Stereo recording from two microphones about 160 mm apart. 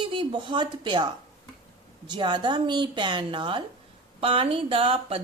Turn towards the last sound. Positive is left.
turn(degrees=-35)  # may be behind; listen again after turning